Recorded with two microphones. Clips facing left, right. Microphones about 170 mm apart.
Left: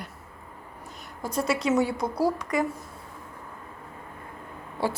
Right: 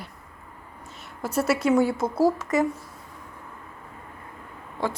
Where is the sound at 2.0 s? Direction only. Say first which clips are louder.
Right 3 dB; 5° right (ahead or behind).